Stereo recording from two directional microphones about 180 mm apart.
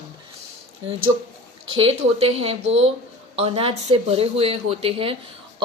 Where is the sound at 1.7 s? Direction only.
30° right (ahead or behind).